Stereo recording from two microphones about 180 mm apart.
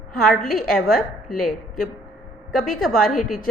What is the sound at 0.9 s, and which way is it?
Speech, 55° left (ahead or behind).